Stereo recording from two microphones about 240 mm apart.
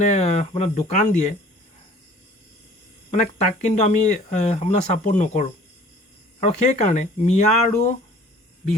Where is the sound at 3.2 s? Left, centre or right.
Left.